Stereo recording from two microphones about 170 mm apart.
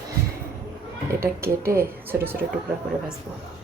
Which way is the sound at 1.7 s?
15° right (ahead or behind).